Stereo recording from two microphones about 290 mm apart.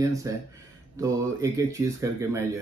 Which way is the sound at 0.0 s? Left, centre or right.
Centre.